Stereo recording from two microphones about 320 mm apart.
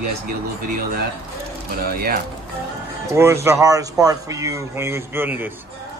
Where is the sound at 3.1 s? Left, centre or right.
Centre.